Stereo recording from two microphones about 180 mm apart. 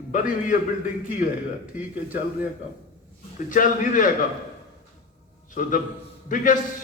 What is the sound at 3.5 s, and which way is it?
Speech, 50° left (ahead or behind).